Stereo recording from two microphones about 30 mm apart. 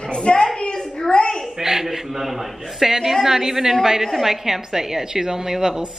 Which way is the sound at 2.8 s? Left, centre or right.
Centre.